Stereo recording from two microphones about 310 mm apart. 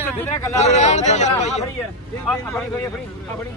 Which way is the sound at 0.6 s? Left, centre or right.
Left.